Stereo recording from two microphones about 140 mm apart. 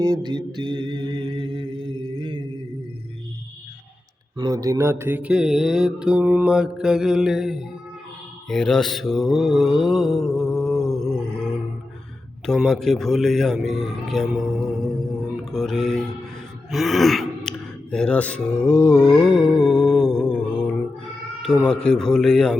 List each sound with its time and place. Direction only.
0.0 s mantra: 30° right (ahead or behind)
4.4 s mantra: 25° right (ahead or behind); by 11.4 s 5° left (ahead or behind)
12.5 s mantra: 5° left (ahead or behind)
15.5 s speech: centre (ahead or behind)
16.7 s a sound: centre (ahead or behind)
17.9 s speech: 5° left (ahead or behind)
19.4 s music: 5° left (ahead or behind)
21.7 s mantra: 5° left (ahead or behind)